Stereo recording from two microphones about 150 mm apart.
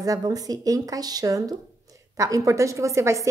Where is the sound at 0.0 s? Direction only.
25° right (ahead or behind).